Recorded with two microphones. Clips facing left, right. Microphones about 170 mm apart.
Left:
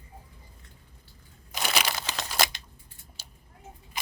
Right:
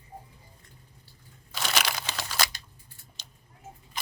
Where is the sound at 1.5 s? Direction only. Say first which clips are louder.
Left 1 dB; 10° left (ahead or behind).